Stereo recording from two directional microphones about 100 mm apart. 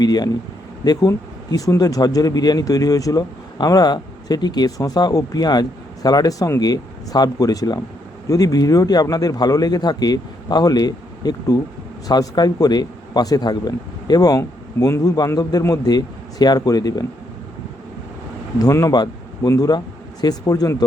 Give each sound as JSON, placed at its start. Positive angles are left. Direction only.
{"t": 0.0, "sound": "speech", "side_deg": 40}
{"t": 18.6, "sound": "speech", "side_deg": 35}